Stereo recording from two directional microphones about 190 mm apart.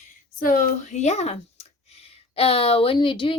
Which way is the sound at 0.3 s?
50° left (ahead or behind).